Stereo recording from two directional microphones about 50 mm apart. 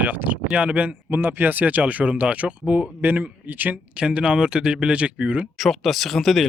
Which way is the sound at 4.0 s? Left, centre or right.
Right.